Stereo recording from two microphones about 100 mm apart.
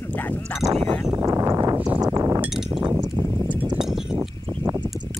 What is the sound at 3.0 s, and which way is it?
Clip-clop, 50° right (ahead or behind).